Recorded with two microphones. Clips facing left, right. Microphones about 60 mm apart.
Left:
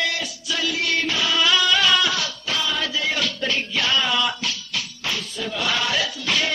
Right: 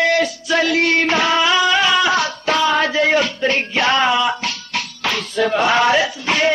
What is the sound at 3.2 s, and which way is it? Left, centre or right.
Music, right.